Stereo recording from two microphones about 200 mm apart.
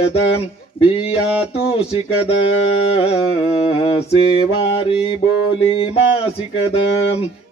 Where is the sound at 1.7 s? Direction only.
30° left (ahead or behind).